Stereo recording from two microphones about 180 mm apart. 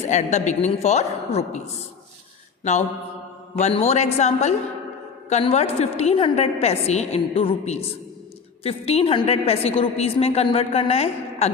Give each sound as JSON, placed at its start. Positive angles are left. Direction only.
{"t": 0.0, "sound": "a woman's voice", "side_deg": 40}
{"t": 3.6, "sound": "a woman's voice", "side_deg": 35}